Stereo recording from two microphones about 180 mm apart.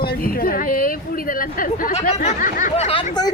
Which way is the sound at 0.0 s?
55° left (ahead or behind).